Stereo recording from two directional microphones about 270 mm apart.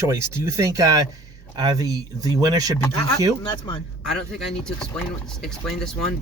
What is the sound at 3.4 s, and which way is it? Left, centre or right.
Speech, centre.